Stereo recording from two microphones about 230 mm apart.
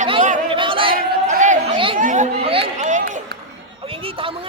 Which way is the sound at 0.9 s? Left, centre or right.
Right.